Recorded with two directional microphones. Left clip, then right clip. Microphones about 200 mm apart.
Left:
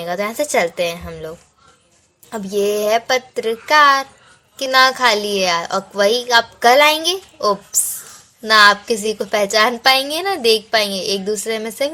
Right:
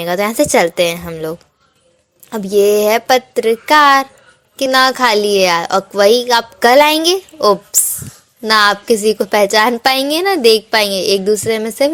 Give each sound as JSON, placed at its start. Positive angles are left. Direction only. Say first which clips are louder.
{"t": 0.0, "sound": "a woman's voice", "louder": "right 6 dB", "side_deg": -35}